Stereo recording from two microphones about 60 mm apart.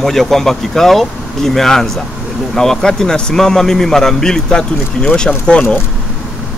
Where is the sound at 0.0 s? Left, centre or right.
Centre.